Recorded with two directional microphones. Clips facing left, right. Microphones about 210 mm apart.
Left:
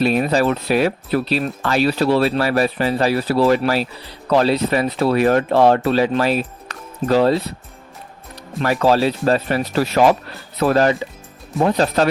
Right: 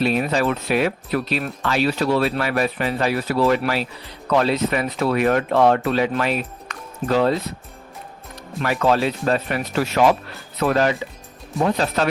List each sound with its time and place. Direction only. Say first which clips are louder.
0.0 s speech: left 3 dB; 40° left (ahead or behind)
8.6 s speech: left 3 dB; 35° left (ahead or behind)